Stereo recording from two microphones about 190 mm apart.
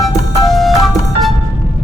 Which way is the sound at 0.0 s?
Centre (ahead or behind).